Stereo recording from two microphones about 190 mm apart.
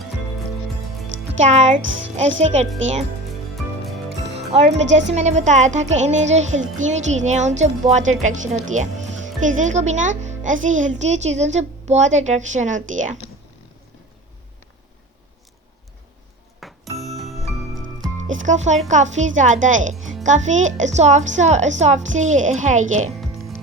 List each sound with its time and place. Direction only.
1.1 s music: 65° right (ahead or behind)
1.4 s speech: 40° right (ahead or behind)
4.4 s music: 35° right (ahead or behind)
5.1 s speech: 35° right (ahead or behind)
16.6 s music: centre (ahead or behind)
17.7 s music: 90° right
18.3 s speech: 40° right (ahead or behind)